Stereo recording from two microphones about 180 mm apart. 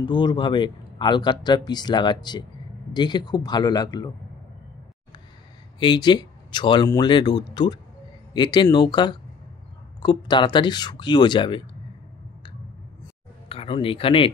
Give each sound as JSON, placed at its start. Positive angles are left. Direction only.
{"t": 0.0, "sound": "speech", "side_deg": 25}
{"t": 5.8, "sound": "speech", "side_deg": 25}
{"t": 10.0, "sound": "speech", "side_deg": 25}
{"t": 13.5, "sound": "speech", "side_deg": 30}